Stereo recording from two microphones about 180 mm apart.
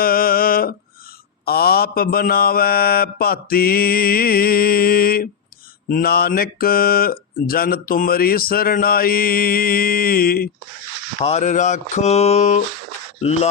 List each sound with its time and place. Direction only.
0.0 s a sound: 55° left (ahead or behind)
1.5 s speech: 60° left (ahead or behind)
11.2 s speech: 40° left (ahead or behind)